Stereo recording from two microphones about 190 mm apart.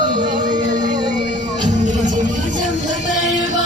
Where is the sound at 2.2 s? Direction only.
40° right (ahead or behind).